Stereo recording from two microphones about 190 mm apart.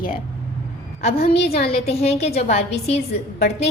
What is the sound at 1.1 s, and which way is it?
Speech, 65° left (ahead or behind).